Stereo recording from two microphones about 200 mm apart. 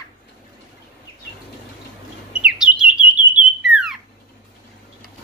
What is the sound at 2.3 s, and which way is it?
Bird, 5° right (ahead or behind).